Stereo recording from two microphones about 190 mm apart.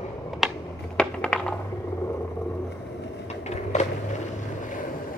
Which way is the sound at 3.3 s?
35° left (ahead or behind).